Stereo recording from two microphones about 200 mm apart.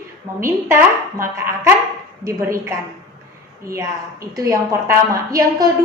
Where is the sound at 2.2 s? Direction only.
15° right (ahead or behind).